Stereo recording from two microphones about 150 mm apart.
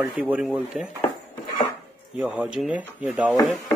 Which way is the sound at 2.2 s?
10° right (ahead or behind).